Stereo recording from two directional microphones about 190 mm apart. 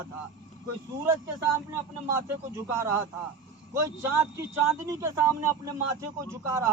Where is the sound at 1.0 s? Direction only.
15° right (ahead or behind).